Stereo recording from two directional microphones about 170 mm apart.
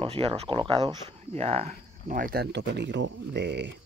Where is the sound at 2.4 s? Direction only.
90° right.